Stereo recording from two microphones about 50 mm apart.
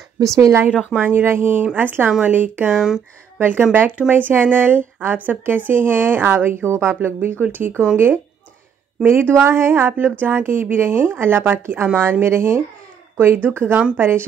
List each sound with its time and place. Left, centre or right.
0.2 s speech: right
0.9 s a woman's voice: right
1.2 s speech: right
2.0 s a woman's voice: right
2.3 s a woman's voice: right
2.7 s speech: centre
3.3 s a woman's voice: right
5.4 s speech: right
9.0 s speech: right